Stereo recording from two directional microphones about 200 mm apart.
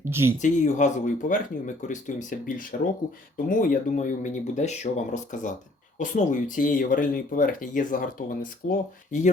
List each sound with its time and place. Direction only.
0.0 s speech: 10° right (ahead or behind)
0.3 s speech: 35° left (ahead or behind)